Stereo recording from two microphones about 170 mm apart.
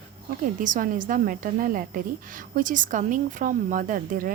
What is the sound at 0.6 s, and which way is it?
A woman's voice, 50° right (ahead or behind).